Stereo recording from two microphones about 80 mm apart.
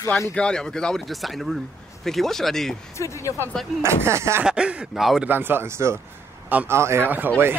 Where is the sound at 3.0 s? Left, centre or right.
Left.